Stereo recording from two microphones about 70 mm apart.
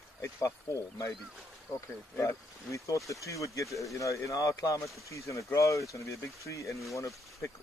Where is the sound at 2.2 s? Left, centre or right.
Left.